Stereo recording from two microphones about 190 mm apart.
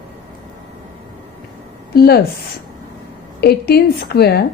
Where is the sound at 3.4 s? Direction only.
55° left (ahead or behind).